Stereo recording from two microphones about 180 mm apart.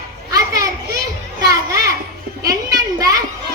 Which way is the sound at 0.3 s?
20° right (ahead or behind).